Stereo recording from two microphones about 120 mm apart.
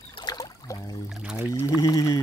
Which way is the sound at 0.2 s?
30° left (ahead or behind).